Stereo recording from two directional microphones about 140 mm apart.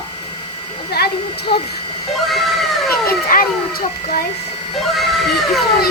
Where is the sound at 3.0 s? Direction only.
90° left.